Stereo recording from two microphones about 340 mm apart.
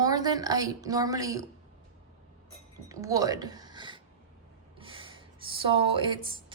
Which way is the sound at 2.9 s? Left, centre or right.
Centre.